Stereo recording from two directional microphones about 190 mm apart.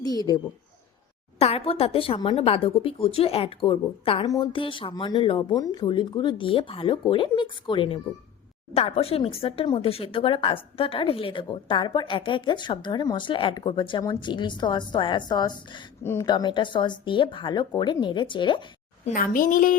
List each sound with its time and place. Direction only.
0.0 s a sound: 20° left (ahead or behind)
1.4 s speech: 30° left (ahead or behind)
19.0 s a woman's voice: 45° left (ahead or behind)